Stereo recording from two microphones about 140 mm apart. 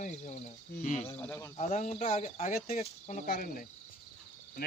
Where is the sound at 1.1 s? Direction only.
10° left (ahead or behind).